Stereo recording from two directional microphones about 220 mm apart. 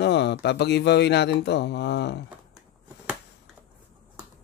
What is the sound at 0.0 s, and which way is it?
Speech, 50° left (ahead or behind).